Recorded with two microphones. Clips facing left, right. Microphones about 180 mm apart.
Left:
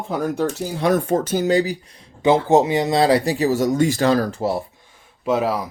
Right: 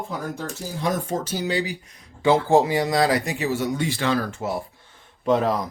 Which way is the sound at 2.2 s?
20° left (ahead or behind).